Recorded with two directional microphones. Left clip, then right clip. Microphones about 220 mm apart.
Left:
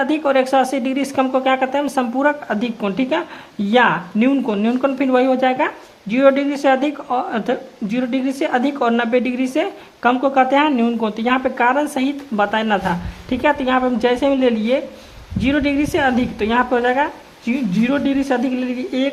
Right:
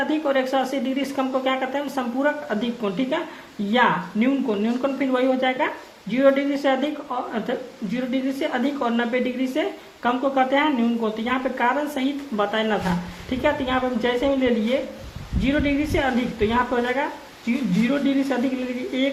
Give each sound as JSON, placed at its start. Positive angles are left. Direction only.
{"t": 0.1, "sound": "a woman's voice", "side_deg": 45}